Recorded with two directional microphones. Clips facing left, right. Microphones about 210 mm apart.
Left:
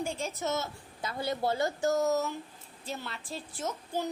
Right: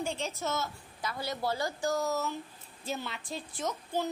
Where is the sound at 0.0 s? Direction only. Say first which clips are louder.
Even; 10° left (ahead or behind).